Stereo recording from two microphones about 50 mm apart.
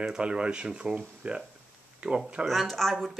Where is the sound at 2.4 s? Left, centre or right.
Centre.